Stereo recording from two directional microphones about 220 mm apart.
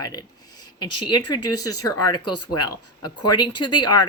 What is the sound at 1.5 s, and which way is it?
Speech, 90° left.